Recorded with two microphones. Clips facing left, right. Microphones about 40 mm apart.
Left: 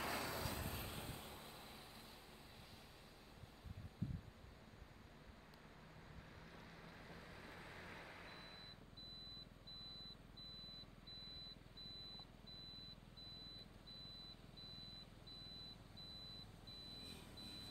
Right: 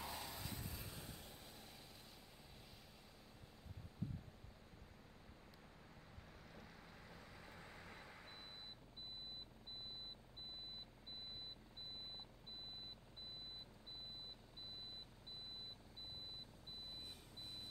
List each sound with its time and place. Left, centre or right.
0.0 s vehicle: left
6.5 s vehicle: centre